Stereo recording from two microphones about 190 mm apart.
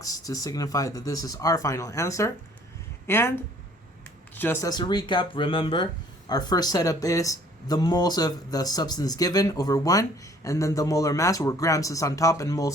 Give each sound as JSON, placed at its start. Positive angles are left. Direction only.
{"t": 0.0, "sound": "speech", "side_deg": 20}